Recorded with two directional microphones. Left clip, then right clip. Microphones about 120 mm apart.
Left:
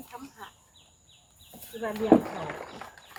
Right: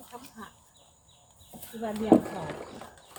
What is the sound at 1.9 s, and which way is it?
Speech, 45° right (ahead or behind).